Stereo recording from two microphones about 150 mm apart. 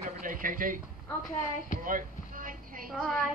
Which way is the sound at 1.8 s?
65° right (ahead or behind).